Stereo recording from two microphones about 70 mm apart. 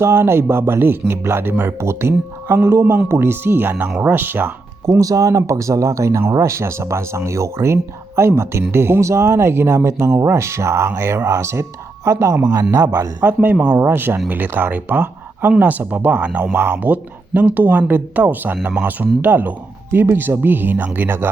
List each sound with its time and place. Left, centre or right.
0.0 s speech: right
4.9 s speech: right
13.2 s speech: right
13.9 s speech: right